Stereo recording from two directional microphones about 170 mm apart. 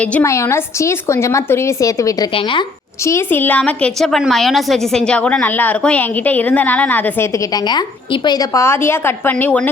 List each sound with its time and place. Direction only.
0.0 s a woman's voice: 10° left (ahead or behind); by 2.6 s 30° left (ahead or behind)
3.0 s a woman's voice: 15° left (ahead or behind)